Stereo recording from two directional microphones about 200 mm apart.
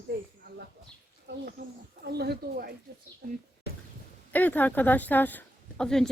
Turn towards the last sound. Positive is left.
turn(degrees=5)  # may be behind; listen again after turning